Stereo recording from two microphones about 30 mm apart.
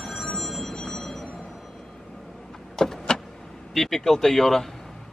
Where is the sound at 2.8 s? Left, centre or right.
Centre.